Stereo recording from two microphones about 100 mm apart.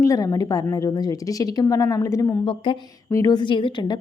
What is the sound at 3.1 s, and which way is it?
Speech, 35° left (ahead or behind).